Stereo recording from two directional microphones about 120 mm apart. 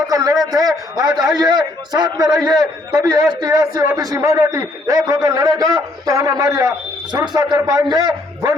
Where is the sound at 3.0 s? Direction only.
30° right (ahead or behind).